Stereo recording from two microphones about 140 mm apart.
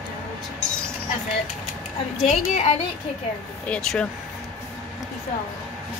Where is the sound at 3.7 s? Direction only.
5° left (ahead or behind).